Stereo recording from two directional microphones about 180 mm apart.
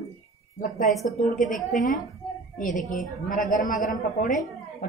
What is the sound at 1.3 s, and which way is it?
A woman's voice, 45° left (ahead or behind).